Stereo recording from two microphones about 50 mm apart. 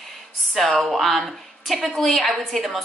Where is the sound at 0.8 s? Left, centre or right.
Centre.